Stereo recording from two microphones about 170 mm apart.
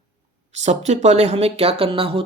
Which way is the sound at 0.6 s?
40° right (ahead or behind).